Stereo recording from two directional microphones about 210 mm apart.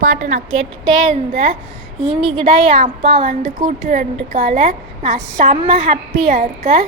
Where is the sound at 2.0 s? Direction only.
25° right (ahead or behind).